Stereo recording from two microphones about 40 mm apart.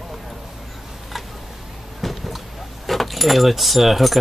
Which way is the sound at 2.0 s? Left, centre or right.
Centre.